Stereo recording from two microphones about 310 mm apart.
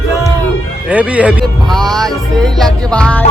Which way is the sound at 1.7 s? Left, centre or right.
Centre.